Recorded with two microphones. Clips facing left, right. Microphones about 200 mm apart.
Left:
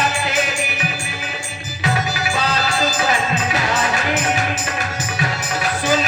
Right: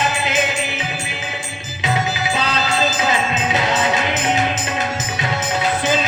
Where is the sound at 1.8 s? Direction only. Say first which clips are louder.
Right 1 dB; 20° right (ahead or behind).